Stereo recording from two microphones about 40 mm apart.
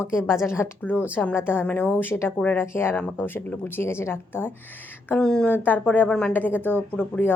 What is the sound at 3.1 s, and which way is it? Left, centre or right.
Speech, left.